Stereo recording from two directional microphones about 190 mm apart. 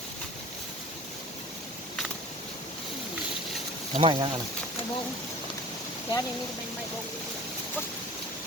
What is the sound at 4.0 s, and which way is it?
Speech, 25° right (ahead or behind).